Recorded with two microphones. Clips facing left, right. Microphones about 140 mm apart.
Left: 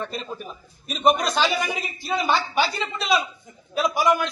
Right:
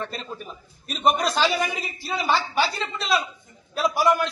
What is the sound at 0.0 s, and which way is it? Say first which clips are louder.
A man's voice: left 2 dB; 5° left (ahead or behind).